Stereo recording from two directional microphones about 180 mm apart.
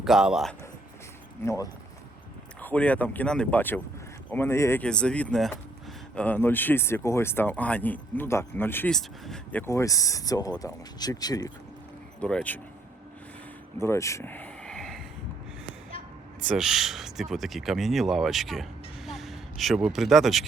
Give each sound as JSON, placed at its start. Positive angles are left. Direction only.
{"t": 0.0, "sound": "speech", "side_deg": -5}
{"t": 1.5, "sound": "speech", "side_deg": 20}
{"t": 2.6, "sound": "speech", "side_deg": 10}
{"t": 12.2, "sound": "speech", "side_deg": 5}
{"t": 13.7, "sound": "a sound", "side_deg": 15}
{"t": 16.5, "sound": "speech", "side_deg": 0}